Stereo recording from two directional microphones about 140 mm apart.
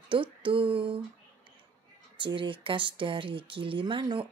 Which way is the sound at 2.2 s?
35° right (ahead or behind).